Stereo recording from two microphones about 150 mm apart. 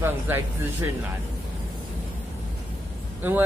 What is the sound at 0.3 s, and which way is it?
Speech, 15° right (ahead or behind).